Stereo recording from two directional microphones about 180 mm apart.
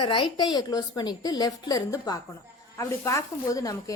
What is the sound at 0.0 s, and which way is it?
A woman's voice, 25° left (ahead or behind).